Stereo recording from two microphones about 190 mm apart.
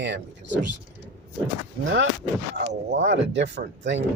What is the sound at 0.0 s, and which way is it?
Speech, 65° right (ahead or behind).